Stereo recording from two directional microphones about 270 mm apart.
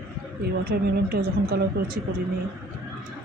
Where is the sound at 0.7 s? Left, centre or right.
Right.